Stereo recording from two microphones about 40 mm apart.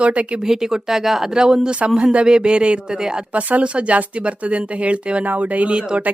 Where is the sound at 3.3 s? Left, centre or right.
Right.